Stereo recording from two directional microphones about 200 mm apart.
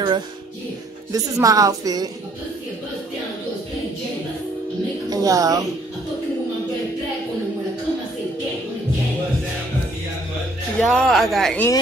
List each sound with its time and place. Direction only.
1.1 s a woman's voice: 15° right (ahead or behind)
5.1 s a woman's voice: 15° right (ahead or behind)
10.8 s speech: centre (ahead or behind)